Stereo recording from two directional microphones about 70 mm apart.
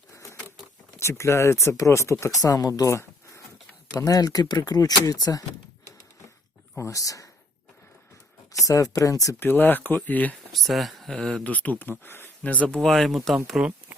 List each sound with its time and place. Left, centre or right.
0.9 s speech: left
2.9 s a sound: left
3.9 s speech: left
6.7 s speech: left
8.5 s speech: left
9.4 s speech: left
10.5 s speech: centre
11.4 s speech: left
12.4 s speech: centre
13.6 s speech: centre